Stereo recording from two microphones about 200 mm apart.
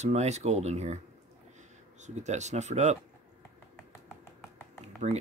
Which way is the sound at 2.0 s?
35° right (ahead or behind).